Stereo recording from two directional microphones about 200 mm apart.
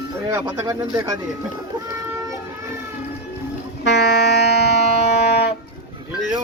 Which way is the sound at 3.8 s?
55° left (ahead or behind).